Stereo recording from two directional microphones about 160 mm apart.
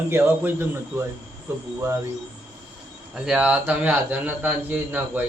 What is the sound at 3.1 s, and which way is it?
Speech, 5° right (ahead or behind).